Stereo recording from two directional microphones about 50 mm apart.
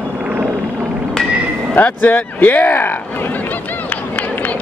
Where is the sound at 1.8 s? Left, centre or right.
Left.